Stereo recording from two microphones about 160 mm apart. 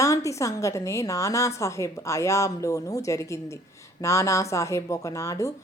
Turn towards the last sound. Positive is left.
turn(degrees=20)  # may be behind; listen again after turning